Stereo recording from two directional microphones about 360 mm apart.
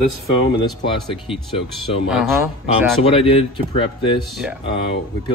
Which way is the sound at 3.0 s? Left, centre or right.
Centre.